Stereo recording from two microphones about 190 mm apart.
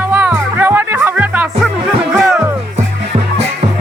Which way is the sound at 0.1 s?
10° right (ahead or behind).